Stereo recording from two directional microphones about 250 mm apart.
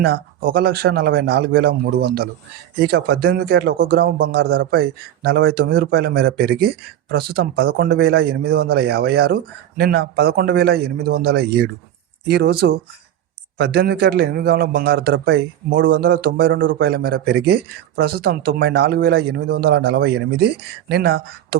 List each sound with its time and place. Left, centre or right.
0.0 s a man's voice: right